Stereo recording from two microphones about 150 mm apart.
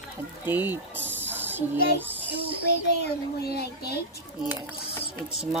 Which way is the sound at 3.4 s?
90° left.